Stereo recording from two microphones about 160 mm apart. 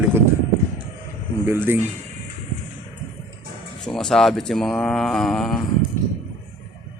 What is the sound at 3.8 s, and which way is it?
Speech, 5° left (ahead or behind).